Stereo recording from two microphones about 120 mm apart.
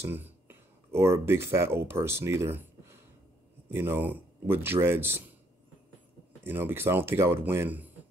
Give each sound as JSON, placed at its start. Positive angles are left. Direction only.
{"t": 0.0, "sound": "a man's voice", "side_deg": -20}
{"t": 6.4, "sound": "a man's voice", "side_deg": -20}